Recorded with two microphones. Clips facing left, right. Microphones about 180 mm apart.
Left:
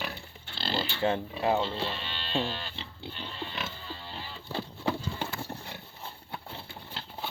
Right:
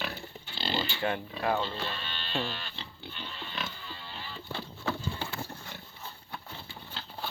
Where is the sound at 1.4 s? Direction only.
20° left (ahead or behind).